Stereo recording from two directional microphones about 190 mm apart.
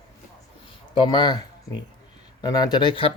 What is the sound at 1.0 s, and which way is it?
Speech, 25° left (ahead or behind).